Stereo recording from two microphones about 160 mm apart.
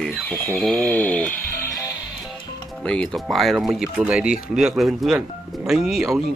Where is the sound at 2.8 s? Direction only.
5° left (ahead or behind).